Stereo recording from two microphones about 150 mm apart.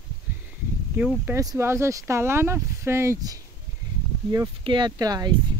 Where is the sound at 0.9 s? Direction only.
15° right (ahead or behind).